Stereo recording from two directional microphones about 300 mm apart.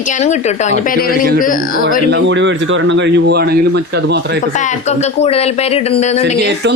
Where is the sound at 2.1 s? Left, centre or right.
Right.